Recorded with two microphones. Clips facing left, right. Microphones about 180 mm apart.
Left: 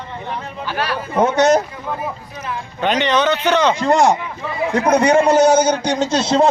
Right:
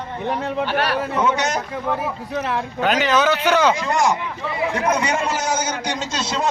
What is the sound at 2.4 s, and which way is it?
Speech, 75° right (ahead or behind).